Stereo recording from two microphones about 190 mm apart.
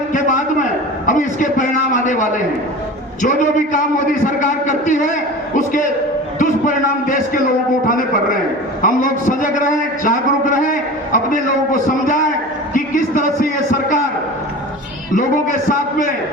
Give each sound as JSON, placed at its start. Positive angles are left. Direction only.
{"t": 0.1, "sound": "a sound", "side_deg": 45}
{"t": 3.2, "sound": "a man's voice", "side_deg": 45}
{"t": 6.4, "sound": "a man's voice", "side_deg": 45}